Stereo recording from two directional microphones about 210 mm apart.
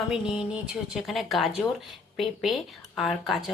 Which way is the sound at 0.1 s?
5° right (ahead or behind).